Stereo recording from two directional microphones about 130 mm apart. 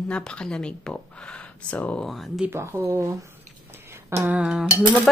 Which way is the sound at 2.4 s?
20° right (ahead or behind).